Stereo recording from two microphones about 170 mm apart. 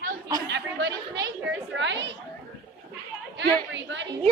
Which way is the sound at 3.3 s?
90° right.